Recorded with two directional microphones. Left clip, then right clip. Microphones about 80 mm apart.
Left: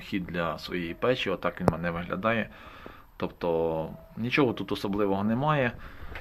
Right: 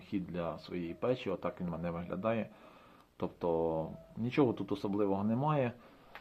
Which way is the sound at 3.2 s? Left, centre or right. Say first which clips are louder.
Left 6 dB; right.